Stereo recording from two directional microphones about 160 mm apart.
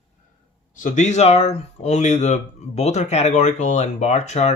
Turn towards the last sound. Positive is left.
turn(degrees=45)  # may be behind; listen again after turning